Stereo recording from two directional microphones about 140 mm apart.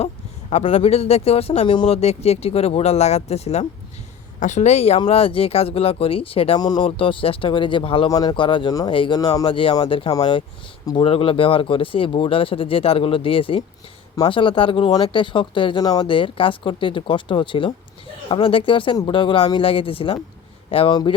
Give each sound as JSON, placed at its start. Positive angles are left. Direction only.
{"t": 0.5, "sound": "speech", "side_deg": 55}
{"t": 2.0, "sound": "a woman's voice", "side_deg": 50}
{"t": 4.9, "sound": "speech", "side_deg": 40}
{"t": 6.6, "sound": "speech", "side_deg": 30}